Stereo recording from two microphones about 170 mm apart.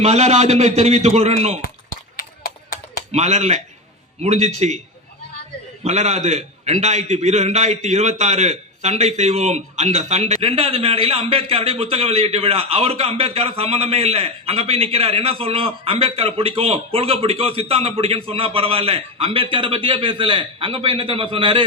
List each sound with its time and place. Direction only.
0.0 s a man's voice: 40° right (ahead or behind)
3.1 s a man's voice: 40° right (ahead or behind)
5.8 s a man's voice: 40° right (ahead or behind)